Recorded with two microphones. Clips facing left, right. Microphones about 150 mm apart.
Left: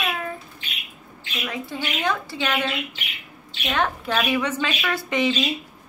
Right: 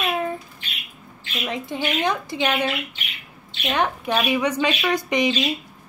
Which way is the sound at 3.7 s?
15° right (ahead or behind).